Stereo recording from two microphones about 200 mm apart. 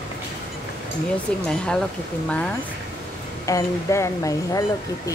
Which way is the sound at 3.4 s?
15° left (ahead or behind).